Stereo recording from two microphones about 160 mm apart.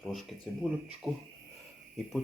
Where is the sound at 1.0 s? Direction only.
5° right (ahead or behind).